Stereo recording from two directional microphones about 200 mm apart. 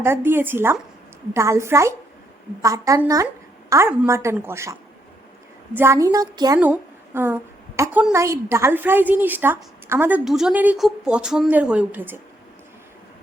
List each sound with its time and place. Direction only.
0.0 s a woman's voice: 10° right (ahead or behind)
6.6 s a woman's voice: 10° right (ahead or behind)